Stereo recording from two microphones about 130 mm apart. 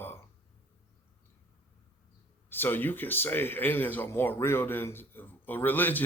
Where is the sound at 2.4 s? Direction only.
15° left (ahead or behind).